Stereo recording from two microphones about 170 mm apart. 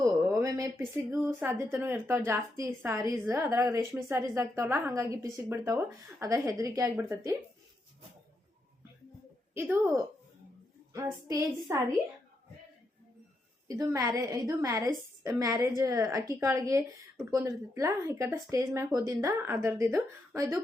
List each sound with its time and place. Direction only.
0.0 s a woman's voice: 20° right (ahead or behind)
9.6 s a woman's voice: 15° right (ahead or behind)
13.7 s a woman's voice: 20° right (ahead or behind)